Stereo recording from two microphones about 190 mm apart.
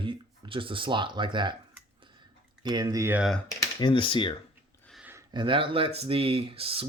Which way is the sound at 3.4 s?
20° left (ahead or behind).